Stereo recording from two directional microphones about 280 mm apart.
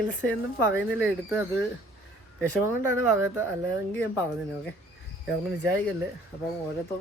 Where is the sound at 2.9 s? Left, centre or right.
Centre.